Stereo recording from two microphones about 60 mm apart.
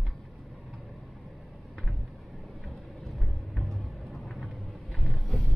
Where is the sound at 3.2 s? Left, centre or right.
Centre.